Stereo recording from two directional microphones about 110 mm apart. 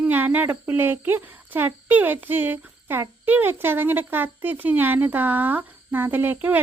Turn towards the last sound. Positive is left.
turn(degrees=-15)  # may be behind; listen again after turning